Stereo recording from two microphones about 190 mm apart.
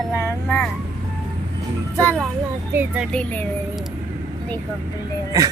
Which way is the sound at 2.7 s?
10° right (ahead or behind).